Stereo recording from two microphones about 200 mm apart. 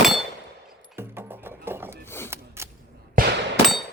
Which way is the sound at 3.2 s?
45° right (ahead or behind).